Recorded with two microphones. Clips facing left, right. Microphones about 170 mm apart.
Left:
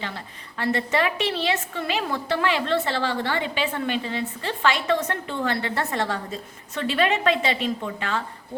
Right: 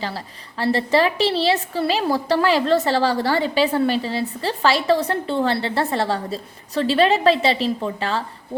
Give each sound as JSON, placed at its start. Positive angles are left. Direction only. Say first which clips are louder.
{"t": 0.6, "sound": "a woman's voice", "louder": "right 5 dB", "side_deg": -30}